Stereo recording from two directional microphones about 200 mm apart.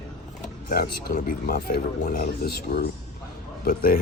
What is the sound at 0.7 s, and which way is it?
Speech, 50° left (ahead or behind).